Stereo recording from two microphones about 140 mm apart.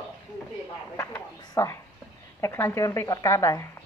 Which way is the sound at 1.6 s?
20° left (ahead or behind).